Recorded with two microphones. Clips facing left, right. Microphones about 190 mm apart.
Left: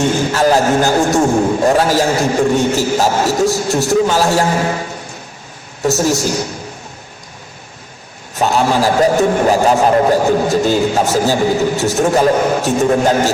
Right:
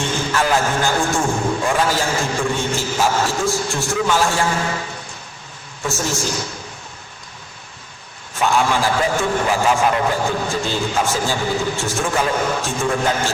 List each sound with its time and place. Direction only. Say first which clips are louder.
0.0 s a man's voice: left 7 dB; 40° left (ahead or behind)
5.8 s a man's voice: left 9 dB; 40° left (ahead or behind)
8.4 s a man's voice: left 4 dB; 40° left (ahead or behind)